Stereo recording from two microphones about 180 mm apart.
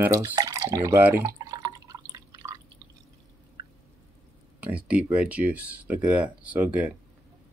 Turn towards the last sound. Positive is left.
turn(degrees=-10)  # may be behind; listen again after turning